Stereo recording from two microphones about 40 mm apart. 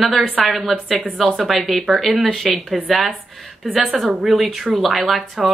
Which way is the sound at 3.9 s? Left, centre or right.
Centre.